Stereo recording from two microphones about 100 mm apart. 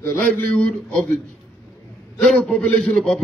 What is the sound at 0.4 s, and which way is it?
Speech, 20° left (ahead or behind).